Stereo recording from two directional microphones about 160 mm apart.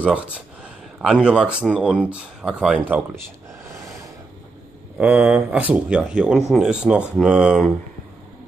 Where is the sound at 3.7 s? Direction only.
20° right (ahead or behind).